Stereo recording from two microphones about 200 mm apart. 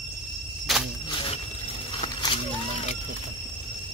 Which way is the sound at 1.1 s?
25° left (ahead or behind).